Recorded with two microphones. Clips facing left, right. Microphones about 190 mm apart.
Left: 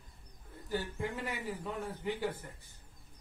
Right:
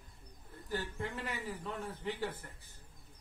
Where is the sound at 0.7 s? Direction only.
10° left (ahead or behind).